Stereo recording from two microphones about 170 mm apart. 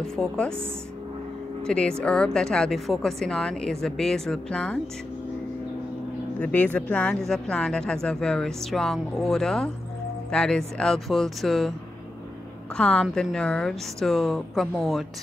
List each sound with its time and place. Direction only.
0.0 s speech: 5° left (ahead or behind)
1.7 s speech: 5° left (ahead or behind)
6.4 s speech: 10° left (ahead or behind)
12.7 s speech: 5° left (ahead or behind)